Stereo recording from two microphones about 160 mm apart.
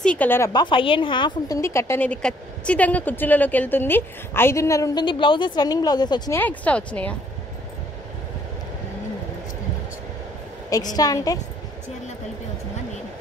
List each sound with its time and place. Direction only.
0.0 s a woman's voice: 10° left (ahead or behind)
0.5 s a woman's voice: 30° left (ahead or behind)
1.6 s a woman's voice: 15° left (ahead or behind)
6.3 s a woman's voice: 10° left (ahead or behind)
11.0 s a woman's voice: 25° left (ahead or behind)